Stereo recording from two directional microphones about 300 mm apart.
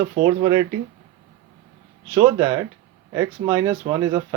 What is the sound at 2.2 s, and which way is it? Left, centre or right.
Speech, centre.